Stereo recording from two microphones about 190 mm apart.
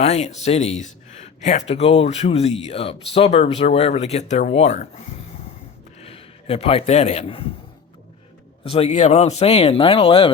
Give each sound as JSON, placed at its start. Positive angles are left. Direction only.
{"t": 0.0, "sound": "a man's voice", "side_deg": 35}
{"t": 8.6, "sound": "speech", "side_deg": 30}